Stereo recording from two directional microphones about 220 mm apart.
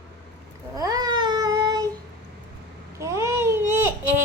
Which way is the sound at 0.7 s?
15° right (ahead or behind).